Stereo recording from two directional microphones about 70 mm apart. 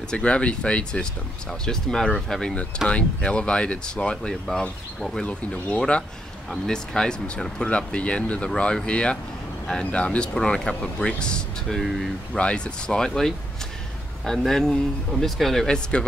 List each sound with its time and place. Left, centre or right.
0.1 s speech: centre
5.2 s speech: centre
11.8 s speech: centre
12.4 s speech: centre